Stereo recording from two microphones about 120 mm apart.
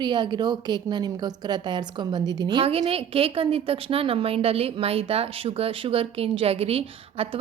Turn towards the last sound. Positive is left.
turn(degrees=-55)  # may be behind; listen again after turning